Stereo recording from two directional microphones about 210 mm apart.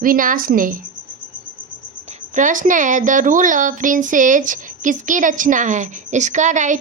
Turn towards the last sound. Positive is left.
turn(degrees=-35)  # may be behind; listen again after turning